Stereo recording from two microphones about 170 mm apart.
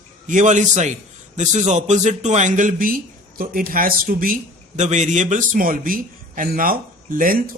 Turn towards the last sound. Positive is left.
turn(degrees=-55)  # may be behind; listen again after turning